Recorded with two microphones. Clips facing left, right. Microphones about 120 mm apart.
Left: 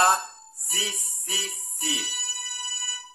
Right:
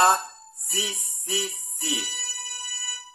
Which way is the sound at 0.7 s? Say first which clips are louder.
Right 2 dB; 20° right (ahead or behind).